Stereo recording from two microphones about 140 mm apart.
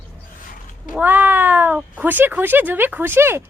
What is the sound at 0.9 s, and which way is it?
A woman's voice, 15° right (ahead or behind).